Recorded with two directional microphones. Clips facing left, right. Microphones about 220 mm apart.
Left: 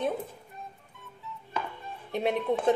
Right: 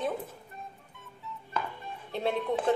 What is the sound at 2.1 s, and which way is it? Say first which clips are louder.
Speech: left 2 dB; 15° left (ahead or behind).